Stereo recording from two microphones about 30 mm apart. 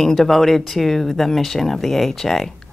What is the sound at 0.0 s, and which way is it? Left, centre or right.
Speech, centre.